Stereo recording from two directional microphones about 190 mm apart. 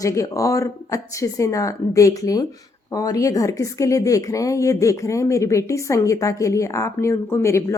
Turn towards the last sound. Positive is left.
turn(degrees=15)  # may be behind; listen again after turning